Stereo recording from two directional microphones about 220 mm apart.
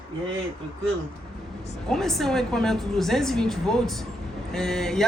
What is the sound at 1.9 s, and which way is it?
A woman's voice, centre (ahead or behind).